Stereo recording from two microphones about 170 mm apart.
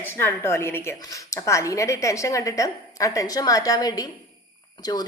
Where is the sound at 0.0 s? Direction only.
15° left (ahead or behind).